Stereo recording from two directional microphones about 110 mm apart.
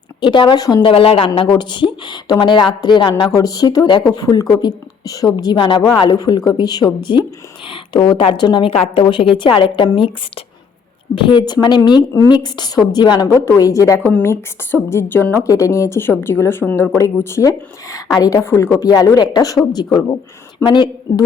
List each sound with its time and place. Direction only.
0.2 s a woman's voice: 45° left (ahead or behind)
1.4 s speech: 45° left (ahead or behind)
8.4 s a woman's voice: 45° left (ahead or behind)
13.3 s speech: 25° left (ahead or behind)
14.1 s speech: 15° left (ahead or behind)
15.4 s speech: 30° left (ahead or behind)
18.9 s a woman's voice: 35° left (ahead or behind)